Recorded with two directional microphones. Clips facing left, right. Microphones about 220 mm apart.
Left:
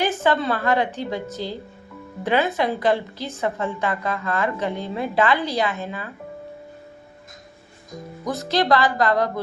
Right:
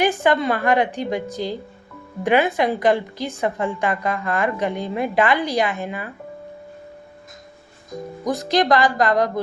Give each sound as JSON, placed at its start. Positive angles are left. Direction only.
{"t": 0.0, "sound": "a woman's voice", "side_deg": -15}
{"t": 8.2, "sound": "a woman's voice", "side_deg": -15}